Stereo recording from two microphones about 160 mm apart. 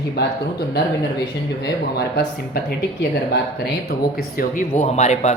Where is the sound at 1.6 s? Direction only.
90° left.